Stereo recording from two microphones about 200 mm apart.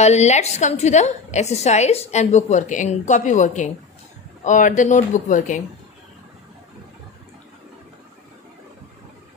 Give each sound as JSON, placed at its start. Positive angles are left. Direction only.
{"t": 0.0, "sound": "a woman's voice", "side_deg": 35}